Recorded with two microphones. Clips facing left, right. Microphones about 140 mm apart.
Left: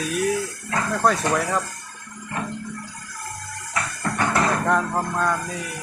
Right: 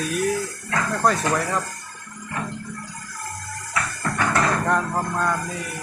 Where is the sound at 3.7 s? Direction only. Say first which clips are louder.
Even; 20° left (ahead or behind).